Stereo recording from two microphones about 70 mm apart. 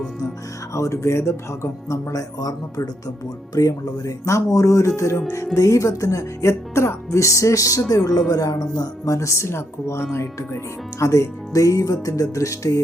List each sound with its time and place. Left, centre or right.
0.7 s speech: left